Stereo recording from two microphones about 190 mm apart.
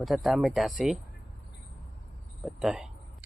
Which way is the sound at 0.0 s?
Centre (ahead or behind).